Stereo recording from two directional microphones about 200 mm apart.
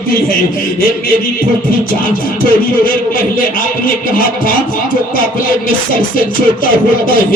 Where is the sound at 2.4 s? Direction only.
45° left (ahead or behind).